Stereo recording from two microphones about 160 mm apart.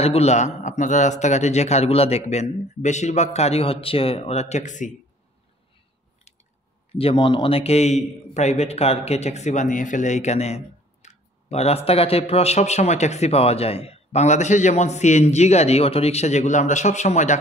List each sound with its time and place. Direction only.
0.0 s a man's voice: 40° left (ahead or behind)
6.9 s a man's voice: 35° left (ahead or behind)